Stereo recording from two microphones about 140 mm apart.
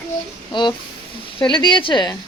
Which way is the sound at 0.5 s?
35° left (ahead or behind).